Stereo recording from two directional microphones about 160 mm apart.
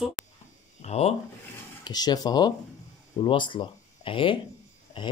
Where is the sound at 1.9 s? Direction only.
25° left (ahead or behind).